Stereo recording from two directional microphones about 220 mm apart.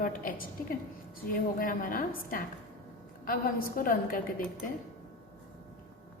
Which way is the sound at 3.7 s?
40° left (ahead or behind).